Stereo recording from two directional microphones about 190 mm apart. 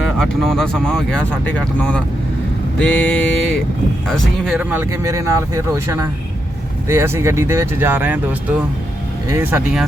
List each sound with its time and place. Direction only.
0.2 s speech: centre (ahead or behind)
4.7 s speech: 15° right (ahead or behind)